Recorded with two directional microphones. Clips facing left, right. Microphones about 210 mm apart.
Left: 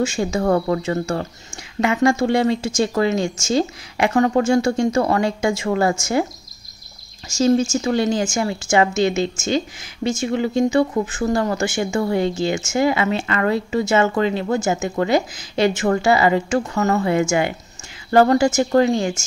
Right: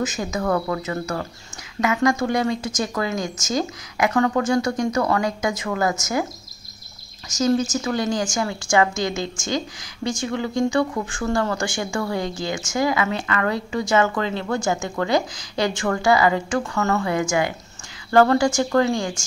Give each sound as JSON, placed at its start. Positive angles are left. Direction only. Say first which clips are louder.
{"t": 0.0, "sound": "speech", "louder": "left 5 dB", "side_deg": 30}
{"t": 7.2, "sound": "speech", "louder": "left 3 dB", "side_deg": 30}